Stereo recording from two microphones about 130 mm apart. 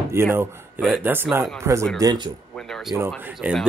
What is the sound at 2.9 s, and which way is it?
Speech, 20° right (ahead or behind).